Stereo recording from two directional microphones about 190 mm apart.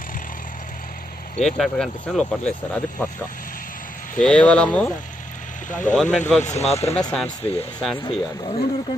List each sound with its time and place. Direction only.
1.4 s speech: 5° left (ahead or behind)
4.2 s speech: 5° left (ahead or behind)
5.7 s speech: 40° left (ahead or behind)
5.9 s speech: 5° left (ahead or behind)
6.4 s speech: 35° left (ahead or behind)
7.0 s speech: 5° left (ahead or behind)
8.0 s speech: 30° left (ahead or behind)